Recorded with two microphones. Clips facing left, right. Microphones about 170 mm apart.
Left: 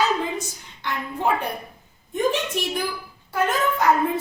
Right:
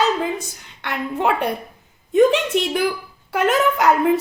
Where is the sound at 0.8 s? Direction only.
70° right (ahead or behind).